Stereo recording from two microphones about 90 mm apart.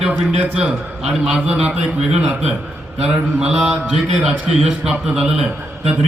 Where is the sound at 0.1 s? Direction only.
15° right (ahead or behind).